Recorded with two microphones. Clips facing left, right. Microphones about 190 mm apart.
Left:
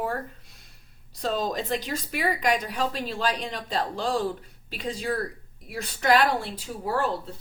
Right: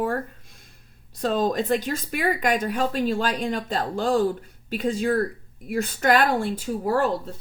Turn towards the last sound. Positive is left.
turn(degrees=-45)  # may be behind; listen again after turning